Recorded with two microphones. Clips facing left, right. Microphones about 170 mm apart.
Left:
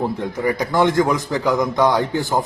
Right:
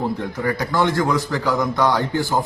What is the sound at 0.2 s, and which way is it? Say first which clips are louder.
A man's voice: left 2 dB; 15° left (ahead or behind).